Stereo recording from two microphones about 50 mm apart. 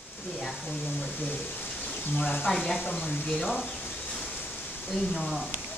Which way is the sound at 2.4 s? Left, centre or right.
Centre.